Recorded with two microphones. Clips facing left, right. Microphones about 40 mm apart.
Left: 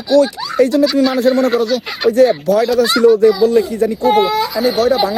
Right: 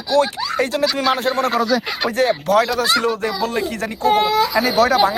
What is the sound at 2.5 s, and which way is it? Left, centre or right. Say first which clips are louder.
Speech: left 2 dB; right.